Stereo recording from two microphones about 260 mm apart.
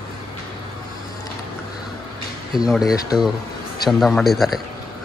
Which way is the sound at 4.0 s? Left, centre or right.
Centre.